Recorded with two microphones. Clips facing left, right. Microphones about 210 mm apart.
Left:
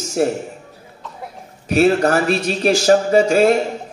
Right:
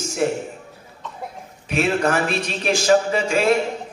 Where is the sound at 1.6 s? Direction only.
40° left (ahead or behind).